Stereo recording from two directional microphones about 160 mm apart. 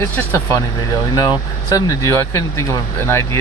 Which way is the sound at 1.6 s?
20° left (ahead or behind).